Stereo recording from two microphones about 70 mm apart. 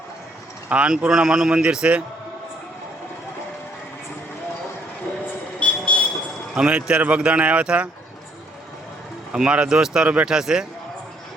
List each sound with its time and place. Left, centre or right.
0.7 s a man's voice: centre
5.5 s vehicle: centre
6.6 s a man's voice: centre
9.3 s a man's voice: centre